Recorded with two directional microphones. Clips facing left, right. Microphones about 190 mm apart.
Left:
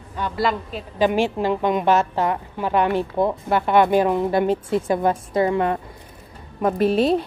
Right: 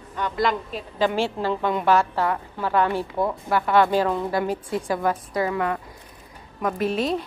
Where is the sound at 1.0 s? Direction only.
15° left (ahead or behind).